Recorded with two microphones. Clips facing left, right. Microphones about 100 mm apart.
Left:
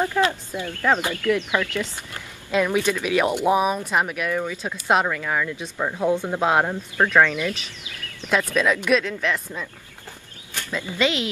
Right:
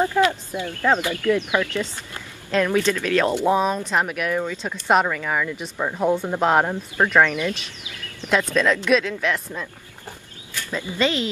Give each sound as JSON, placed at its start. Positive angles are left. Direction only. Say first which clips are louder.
{"t": 0.3, "sound": "speech", "louder": "right 2 dB", "side_deg": -20}
{"t": 2.5, "sound": "speech", "louder": "right 1 dB", "side_deg": 15}
{"t": 4.5, "sound": "speech", "louder": "right 1 dB", "side_deg": 10}
{"t": 6.7, "sound": "speech", "louder": "even", "side_deg": -15}
{"t": 8.5, "sound": "speech", "louder": "right 1 dB", "side_deg": 10}
{"t": 10.7, "sound": "a woman's voice", "louder": "right 1 dB", "side_deg": -15}
{"t": 11.0, "sound": "speech", "louder": "right 1 dB", "side_deg": 10}